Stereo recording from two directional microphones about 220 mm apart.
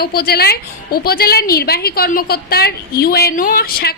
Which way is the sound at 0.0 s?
45° left (ahead or behind).